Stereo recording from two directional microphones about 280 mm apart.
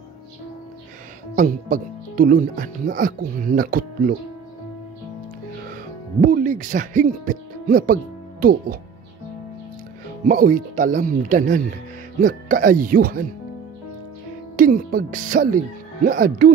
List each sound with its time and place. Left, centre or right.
1.3 s speech: right
6.2 s speech: right
10.2 s speech: right
14.6 s speech: right